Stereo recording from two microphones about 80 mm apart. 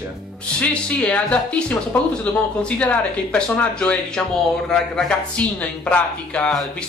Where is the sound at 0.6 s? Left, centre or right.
Centre.